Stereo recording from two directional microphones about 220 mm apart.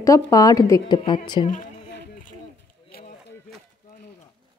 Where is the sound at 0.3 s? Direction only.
15° left (ahead or behind).